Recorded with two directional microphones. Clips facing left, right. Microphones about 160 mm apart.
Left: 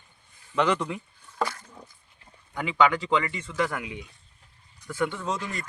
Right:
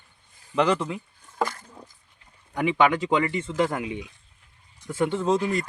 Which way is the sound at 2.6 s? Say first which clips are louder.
Right 2 dB; 20° right (ahead or behind).